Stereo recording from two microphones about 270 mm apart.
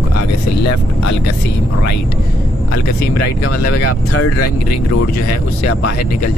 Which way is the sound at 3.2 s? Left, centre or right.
Left.